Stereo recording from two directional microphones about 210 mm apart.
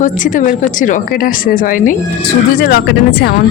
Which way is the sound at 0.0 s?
40° left (ahead or behind).